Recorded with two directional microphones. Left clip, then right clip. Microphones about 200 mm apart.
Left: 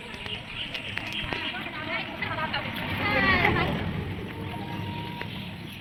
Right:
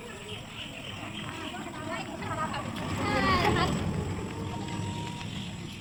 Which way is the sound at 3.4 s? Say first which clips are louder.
Left 2 dB; 30° left (ahead or behind).